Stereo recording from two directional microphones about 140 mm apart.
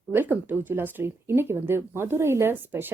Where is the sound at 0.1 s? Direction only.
15° right (ahead or behind).